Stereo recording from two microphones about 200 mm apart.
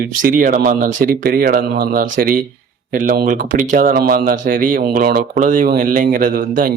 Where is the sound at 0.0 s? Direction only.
45° right (ahead or behind).